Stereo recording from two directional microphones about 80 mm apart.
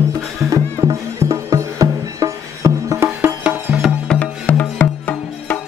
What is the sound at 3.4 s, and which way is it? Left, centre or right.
Music, centre.